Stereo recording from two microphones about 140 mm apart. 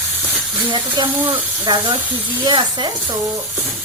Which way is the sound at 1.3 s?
35° right (ahead or behind).